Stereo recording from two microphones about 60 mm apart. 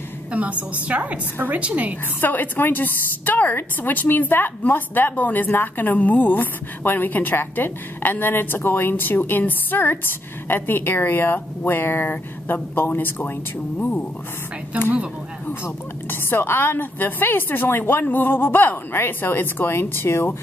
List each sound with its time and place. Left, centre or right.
0.3 s a woman's voice: right
2.2 s a woman's voice: left
13.7 s speech: left
15.6 s a woman's voice: left